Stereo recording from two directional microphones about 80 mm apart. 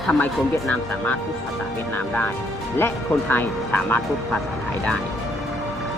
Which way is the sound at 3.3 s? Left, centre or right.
Left.